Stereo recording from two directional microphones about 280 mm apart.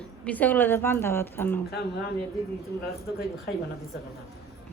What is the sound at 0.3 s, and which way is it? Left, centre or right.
A woman's voice, centre.